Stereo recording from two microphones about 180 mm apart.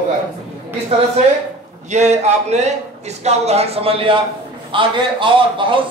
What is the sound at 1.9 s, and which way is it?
Speech, 40° right (ahead or behind).